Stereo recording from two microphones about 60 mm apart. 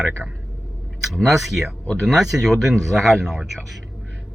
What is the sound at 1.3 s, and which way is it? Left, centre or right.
A man's voice, centre.